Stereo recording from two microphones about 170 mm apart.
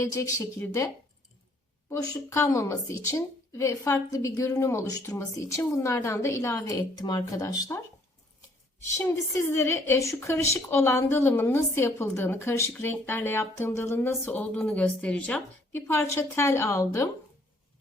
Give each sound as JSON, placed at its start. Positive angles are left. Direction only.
{"t": 0.0, "sound": "a woman's voice", "side_deg": 20}
{"t": 1.9, "sound": "a woman's voice", "side_deg": 15}
{"t": 9.0, "sound": "a woman's voice", "side_deg": 15}